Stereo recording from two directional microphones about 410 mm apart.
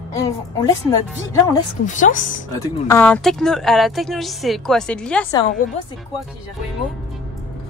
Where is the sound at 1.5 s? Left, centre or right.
Centre.